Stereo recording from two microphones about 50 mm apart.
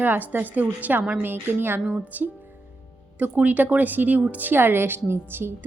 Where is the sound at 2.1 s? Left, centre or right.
Right.